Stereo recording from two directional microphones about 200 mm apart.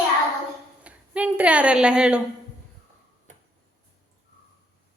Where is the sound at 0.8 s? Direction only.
5° right (ahead or behind).